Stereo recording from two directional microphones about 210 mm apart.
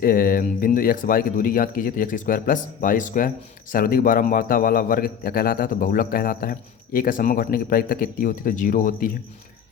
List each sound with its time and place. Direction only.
0.0 s a man's voice: 40° left (ahead or behind)